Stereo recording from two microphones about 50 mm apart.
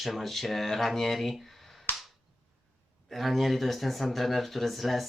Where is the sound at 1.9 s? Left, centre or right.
Left.